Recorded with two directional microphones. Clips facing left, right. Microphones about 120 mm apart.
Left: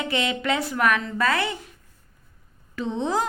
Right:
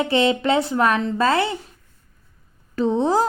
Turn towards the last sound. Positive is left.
turn(degrees=-35)  # may be behind; listen again after turning